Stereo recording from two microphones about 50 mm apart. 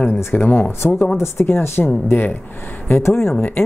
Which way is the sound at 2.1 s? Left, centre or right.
Left.